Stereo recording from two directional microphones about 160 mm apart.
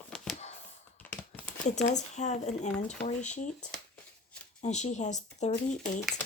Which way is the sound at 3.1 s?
50° left (ahead or behind).